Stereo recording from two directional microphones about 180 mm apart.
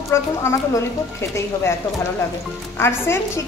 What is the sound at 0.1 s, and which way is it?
Speech, 15° left (ahead or behind).